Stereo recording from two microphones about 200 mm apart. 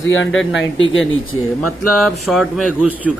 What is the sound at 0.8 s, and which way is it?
Speech, 75° left (ahead or behind).